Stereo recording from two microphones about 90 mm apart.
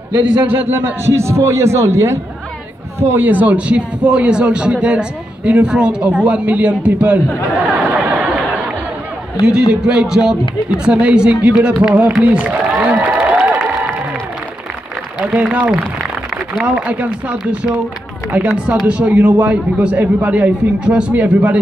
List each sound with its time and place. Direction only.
0.1 s a man's voice: 20° right (ahead or behind)
7.7 s chatter: 15° right (ahead or behind)
9.5 s a man's voice: 10° right (ahead or behind)
12.2 s a sound: 15° right (ahead or behind)
13.4 s crowd: 20° right (ahead or behind)
15.1 s a man's voice: 15° right (ahead or behind)